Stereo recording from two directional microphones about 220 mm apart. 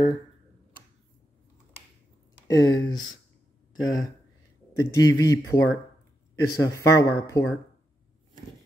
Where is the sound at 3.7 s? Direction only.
65° left (ahead or behind).